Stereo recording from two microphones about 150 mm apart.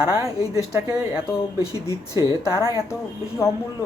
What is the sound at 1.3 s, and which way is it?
Speech, 20° left (ahead or behind).